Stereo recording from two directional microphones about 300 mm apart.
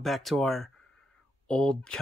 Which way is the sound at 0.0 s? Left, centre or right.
Centre.